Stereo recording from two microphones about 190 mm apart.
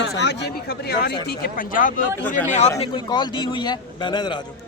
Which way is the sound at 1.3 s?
45° left (ahead or behind).